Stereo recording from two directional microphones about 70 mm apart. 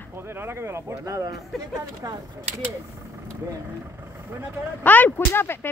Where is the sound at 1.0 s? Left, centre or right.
Right.